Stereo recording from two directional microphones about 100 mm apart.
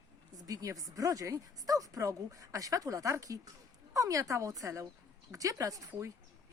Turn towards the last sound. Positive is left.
turn(degrees=-35)  # may be behind; listen again after turning